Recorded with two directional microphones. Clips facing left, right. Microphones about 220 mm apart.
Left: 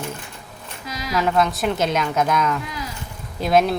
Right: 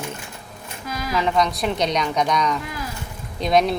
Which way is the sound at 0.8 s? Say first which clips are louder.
Right 2 dB; 50° right (ahead or behind).